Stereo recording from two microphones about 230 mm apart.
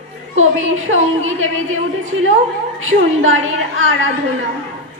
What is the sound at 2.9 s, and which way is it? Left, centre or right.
Speech, right.